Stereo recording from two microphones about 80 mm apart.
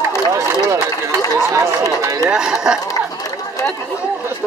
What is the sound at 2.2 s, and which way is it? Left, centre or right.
Speech, centre.